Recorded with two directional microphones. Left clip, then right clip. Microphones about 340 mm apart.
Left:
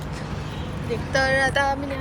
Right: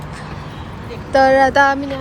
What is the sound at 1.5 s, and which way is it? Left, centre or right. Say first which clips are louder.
Music: right 9 dB; right.